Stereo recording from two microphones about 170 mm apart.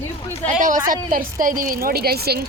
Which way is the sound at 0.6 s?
55° right (ahead or behind).